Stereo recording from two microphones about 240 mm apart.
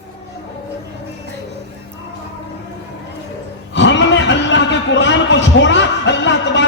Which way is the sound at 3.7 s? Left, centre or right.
Left.